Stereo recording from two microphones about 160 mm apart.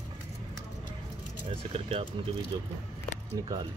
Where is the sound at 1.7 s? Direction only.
35° right (ahead or behind).